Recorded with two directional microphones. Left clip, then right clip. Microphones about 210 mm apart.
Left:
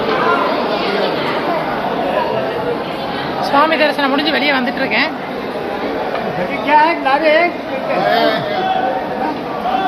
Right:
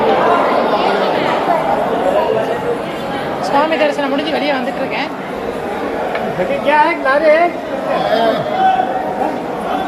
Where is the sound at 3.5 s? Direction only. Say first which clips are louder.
Left 1 dB; 10° left (ahead or behind).